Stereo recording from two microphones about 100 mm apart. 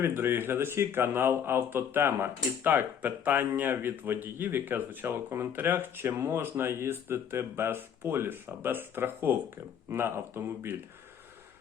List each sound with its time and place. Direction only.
0.0 s speech: 20° right (ahead or behind)